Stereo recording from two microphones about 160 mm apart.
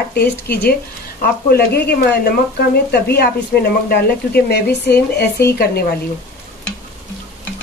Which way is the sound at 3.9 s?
90° left.